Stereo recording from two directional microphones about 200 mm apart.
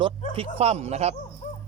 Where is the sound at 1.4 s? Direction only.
35° left (ahead or behind).